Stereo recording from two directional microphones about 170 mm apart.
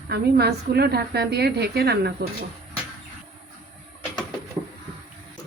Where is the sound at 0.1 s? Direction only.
70° right (ahead or behind).